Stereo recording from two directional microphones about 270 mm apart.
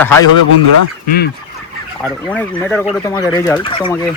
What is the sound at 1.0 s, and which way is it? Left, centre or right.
Speech, left.